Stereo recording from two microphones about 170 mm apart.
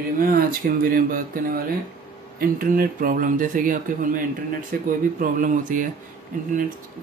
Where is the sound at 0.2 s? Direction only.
55° right (ahead or behind).